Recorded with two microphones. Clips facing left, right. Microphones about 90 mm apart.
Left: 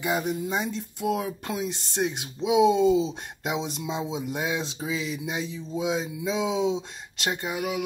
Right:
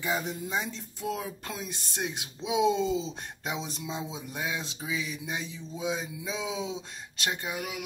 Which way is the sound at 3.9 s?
20° left (ahead or behind).